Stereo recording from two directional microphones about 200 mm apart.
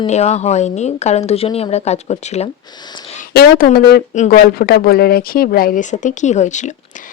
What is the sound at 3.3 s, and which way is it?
A woman's voice, 50° left (ahead or behind).